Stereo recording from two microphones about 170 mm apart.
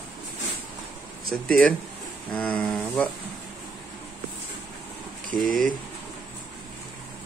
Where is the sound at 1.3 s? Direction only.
Centre (ahead or behind).